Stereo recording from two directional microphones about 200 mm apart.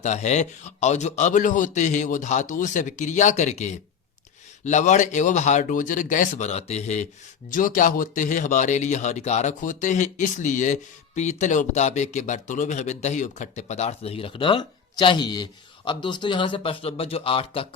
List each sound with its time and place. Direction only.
0.0 s speech: 35° left (ahead or behind)